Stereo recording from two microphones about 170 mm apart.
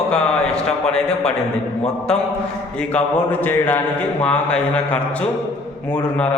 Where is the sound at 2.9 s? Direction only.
5° left (ahead or behind).